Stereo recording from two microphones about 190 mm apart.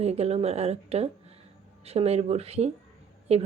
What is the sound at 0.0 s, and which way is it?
Speech, 35° right (ahead or behind).